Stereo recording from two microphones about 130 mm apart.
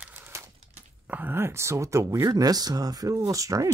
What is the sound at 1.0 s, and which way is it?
Speech, 15° right (ahead or behind).